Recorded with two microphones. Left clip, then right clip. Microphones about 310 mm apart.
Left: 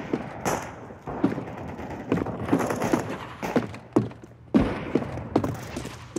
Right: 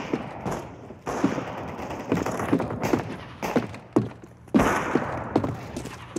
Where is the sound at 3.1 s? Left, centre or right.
Centre.